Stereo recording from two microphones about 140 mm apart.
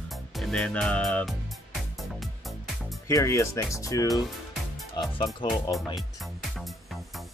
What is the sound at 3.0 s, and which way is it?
Speech, 20° left (ahead or behind).